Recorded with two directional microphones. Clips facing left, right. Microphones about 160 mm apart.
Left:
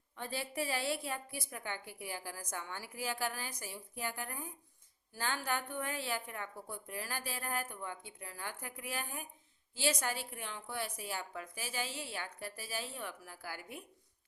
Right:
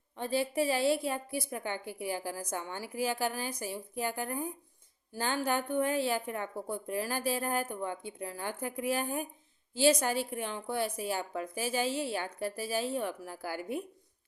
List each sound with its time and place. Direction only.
0.2 s a woman's voice: 20° right (ahead or behind)